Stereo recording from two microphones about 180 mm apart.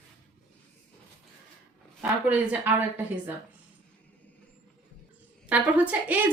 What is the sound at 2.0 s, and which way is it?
A woman's voice, 10° right (ahead or behind).